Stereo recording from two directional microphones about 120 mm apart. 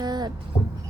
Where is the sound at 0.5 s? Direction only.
35° left (ahead or behind).